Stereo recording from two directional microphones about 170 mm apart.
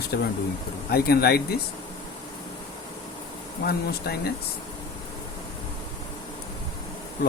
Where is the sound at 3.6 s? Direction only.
65° left (ahead or behind).